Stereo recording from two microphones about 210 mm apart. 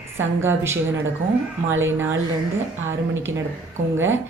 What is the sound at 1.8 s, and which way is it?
Speech, 10° right (ahead or behind).